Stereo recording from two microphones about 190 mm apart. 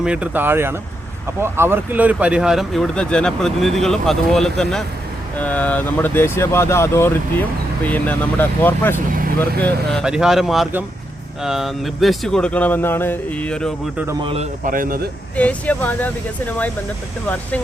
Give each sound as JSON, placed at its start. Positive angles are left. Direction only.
{"t": 0.0, "sound": "speech", "side_deg": -5}
{"t": 10.0, "sound": "speech", "side_deg": -5}
{"t": 14.1, "sound": "speech", "side_deg": -25}
{"t": 14.6, "sound": "speech", "side_deg": -45}
{"t": 15.4, "sound": "speech", "side_deg": 5}